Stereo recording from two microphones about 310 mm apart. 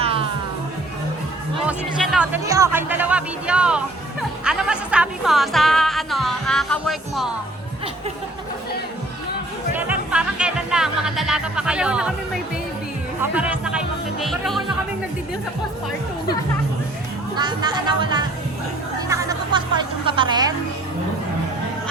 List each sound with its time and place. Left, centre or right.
1.6 s speech: centre
9.7 s music: centre
13.3 s speech: centre
17.3 s speech: centre
18.9 s music: centre